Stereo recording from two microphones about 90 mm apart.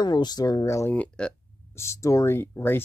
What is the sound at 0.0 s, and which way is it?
Speech, 50° left (ahead or behind).